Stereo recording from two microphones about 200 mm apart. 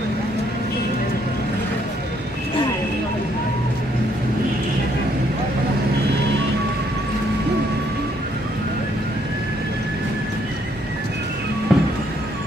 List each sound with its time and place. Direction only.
11.7 s music: centre (ahead or behind)